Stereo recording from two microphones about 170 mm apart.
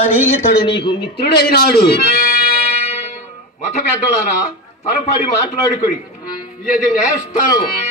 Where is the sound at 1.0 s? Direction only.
70° left (ahead or behind).